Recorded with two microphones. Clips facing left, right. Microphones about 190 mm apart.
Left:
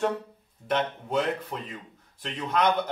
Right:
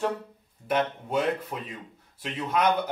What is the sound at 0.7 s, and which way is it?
Speech, 10° right (ahead or behind).